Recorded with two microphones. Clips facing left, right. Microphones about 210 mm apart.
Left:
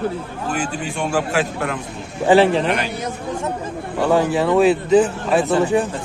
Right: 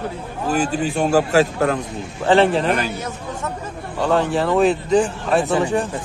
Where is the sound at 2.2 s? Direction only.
10° left (ahead or behind).